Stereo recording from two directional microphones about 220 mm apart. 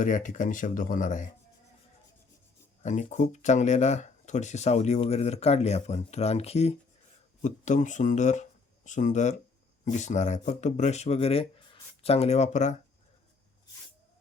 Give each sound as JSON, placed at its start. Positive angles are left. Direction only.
{"t": 0.0, "sound": "speech", "side_deg": 35}
{"t": 2.8, "sound": "speech", "side_deg": 35}